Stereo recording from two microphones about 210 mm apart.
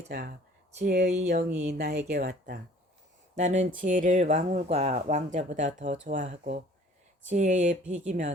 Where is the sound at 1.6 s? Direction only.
50° right (ahead or behind).